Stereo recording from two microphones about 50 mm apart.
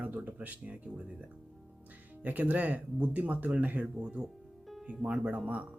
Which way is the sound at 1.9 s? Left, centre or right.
Right.